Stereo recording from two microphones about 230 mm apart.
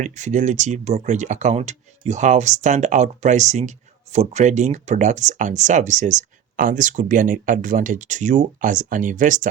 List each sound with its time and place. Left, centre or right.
0.0 s speech: right